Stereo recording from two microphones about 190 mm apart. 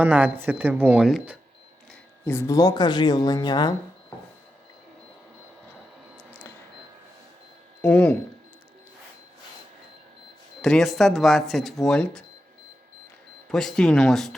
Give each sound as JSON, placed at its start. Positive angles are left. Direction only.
{"t": 0.0, "sound": "speech", "side_deg": -10}
{"t": 2.2, "sound": "speech", "side_deg": 15}
{"t": 7.8, "sound": "speech", "side_deg": 10}
{"t": 10.6, "sound": "speech", "side_deg": 0}
{"t": 13.5, "sound": "speech", "side_deg": 5}